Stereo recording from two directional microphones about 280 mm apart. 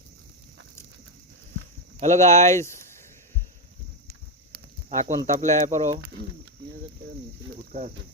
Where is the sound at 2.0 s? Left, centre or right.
Right.